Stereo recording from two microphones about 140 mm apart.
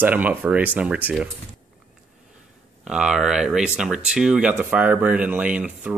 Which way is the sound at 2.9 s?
5° right (ahead or behind).